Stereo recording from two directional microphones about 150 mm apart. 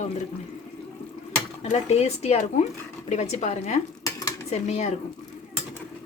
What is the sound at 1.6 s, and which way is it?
Speech, 45° left (ahead or behind).